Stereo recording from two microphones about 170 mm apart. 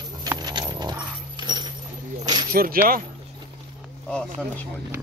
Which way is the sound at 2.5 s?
60° right (ahead or behind).